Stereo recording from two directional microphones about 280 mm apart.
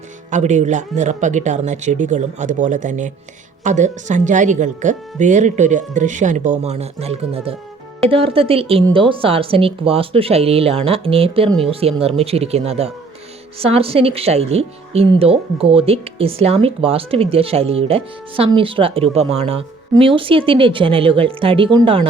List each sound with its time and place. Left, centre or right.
0.3 s a woman's voice: right